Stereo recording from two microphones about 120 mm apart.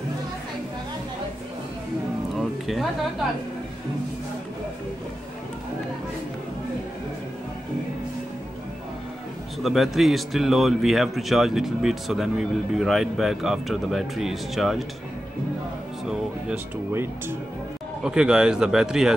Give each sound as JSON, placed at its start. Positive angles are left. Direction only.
{"t": 2.3, "sound": "music", "side_deg": 0}
{"t": 9.6, "sound": "speech", "side_deg": 0}
{"t": 16.1, "sound": "speech", "side_deg": -5}
{"t": 16.9, "sound": "speech", "side_deg": -20}
{"t": 18.0, "sound": "speech", "side_deg": -5}